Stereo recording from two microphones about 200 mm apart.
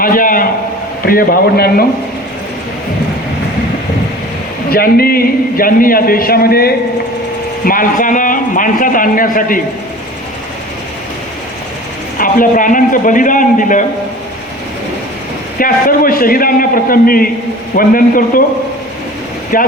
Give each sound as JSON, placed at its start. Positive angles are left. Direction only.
{"t": 0.0, "sound": "a sound", "side_deg": 45}
{"t": 1.0, "sound": "a man's voice", "side_deg": 45}
{"t": 4.7, "sound": "a man's voice", "side_deg": 50}
{"t": 12.1, "sound": "a man's voice", "side_deg": 45}
{"t": 15.5, "sound": "a man's voice", "side_deg": 45}
{"t": 19.5, "sound": "a man's voice", "side_deg": 45}